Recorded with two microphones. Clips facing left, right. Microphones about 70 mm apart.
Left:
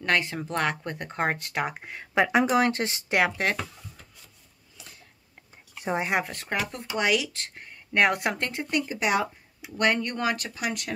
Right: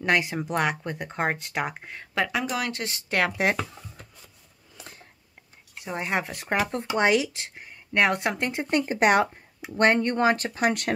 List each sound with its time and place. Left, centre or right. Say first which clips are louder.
0.0 s speech: right 2 dB; centre
2.1 s speech: left 5 dB; left
3.3 s speech: right 3 dB; centre
4.7 s a sound: right 5 dB; right
5.9 s speech: left 1 dB; centre
6.2 s speech: right 3 dB; centre
6.9 s speech: right 3 dB; right
7.3 s speech: even; centre
8.4 s speech: right 3 dB; centre
8.6 s speech: right 6 dB; right
9.6 s speech: right 4 dB; right